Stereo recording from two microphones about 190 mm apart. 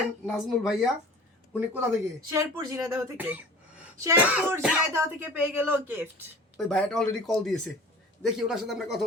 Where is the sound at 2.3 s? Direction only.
20° right (ahead or behind).